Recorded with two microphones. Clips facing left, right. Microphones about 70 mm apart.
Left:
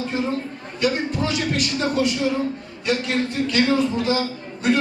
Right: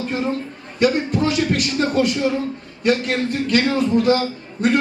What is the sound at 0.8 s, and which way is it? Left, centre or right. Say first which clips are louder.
A man's voice: right 4 dB; right.